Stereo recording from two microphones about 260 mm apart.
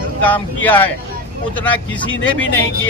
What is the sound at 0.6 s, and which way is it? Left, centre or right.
Speech, centre.